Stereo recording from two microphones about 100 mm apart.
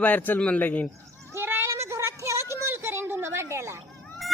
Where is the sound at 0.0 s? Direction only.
15° left (ahead or behind).